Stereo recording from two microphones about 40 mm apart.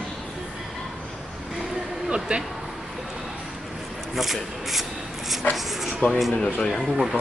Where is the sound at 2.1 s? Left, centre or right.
Right.